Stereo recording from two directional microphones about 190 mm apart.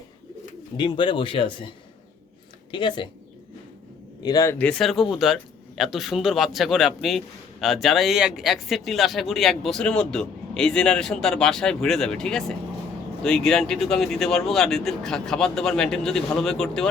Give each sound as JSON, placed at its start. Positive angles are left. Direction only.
{"t": 0.8, "sound": "speech", "side_deg": 25}
{"t": 2.7, "sound": "speech", "side_deg": 25}
{"t": 4.2, "sound": "speech", "side_deg": 20}